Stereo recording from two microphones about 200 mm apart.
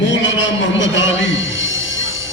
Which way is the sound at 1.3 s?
70° left (ahead or behind).